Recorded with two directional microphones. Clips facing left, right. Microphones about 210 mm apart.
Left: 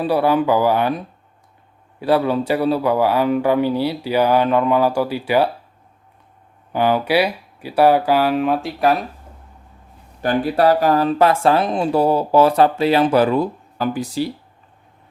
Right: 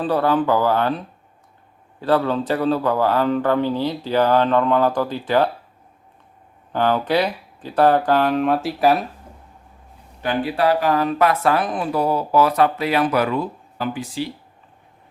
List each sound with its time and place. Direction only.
0.0 s speech: 10° left (ahead or behind)
6.7 s speech: 10° left (ahead or behind)
10.2 s speech: 45° left (ahead or behind)